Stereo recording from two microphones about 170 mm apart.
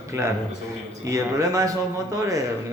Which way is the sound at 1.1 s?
20° right (ahead or behind).